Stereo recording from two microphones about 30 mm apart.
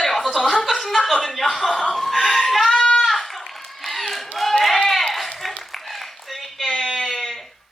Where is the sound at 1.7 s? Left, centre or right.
Centre.